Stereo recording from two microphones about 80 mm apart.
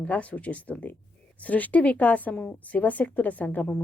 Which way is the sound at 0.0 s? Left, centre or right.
Centre.